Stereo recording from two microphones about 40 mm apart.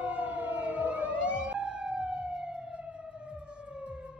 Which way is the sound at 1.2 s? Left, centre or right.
Right.